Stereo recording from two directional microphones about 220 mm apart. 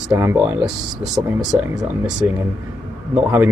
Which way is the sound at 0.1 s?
15° right (ahead or behind).